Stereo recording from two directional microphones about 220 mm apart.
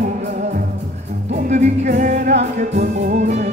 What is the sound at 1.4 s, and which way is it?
Music, 35° right (ahead or behind).